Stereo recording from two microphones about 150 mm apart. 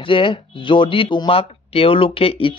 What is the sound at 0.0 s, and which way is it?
Speech, 35° left (ahead or behind).